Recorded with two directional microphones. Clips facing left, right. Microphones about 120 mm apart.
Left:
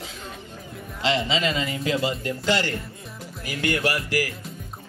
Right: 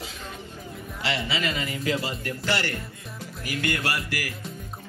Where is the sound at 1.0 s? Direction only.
20° left (ahead or behind).